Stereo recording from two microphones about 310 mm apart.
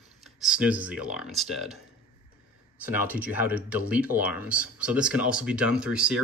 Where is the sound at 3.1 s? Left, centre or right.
Centre.